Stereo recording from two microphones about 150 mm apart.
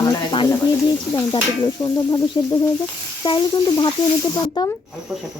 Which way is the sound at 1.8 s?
25° left (ahead or behind).